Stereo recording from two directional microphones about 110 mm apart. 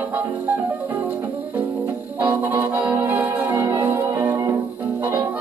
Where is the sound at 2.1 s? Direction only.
20° right (ahead or behind).